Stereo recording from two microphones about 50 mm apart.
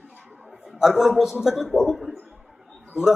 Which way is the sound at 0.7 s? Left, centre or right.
Centre.